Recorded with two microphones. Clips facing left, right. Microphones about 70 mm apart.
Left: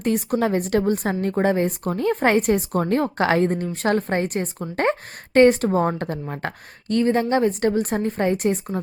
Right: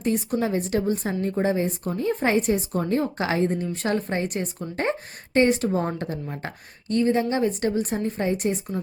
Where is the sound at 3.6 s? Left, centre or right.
Left.